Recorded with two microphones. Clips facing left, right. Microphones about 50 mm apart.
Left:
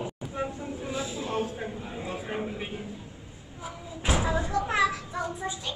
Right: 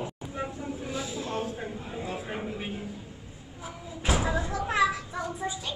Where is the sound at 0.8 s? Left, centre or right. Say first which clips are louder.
Left 2 dB; left.